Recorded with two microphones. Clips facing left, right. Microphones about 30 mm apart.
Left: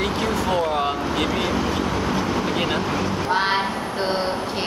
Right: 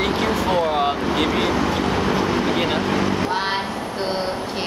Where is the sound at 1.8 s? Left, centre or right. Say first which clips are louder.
Right 3 dB; right.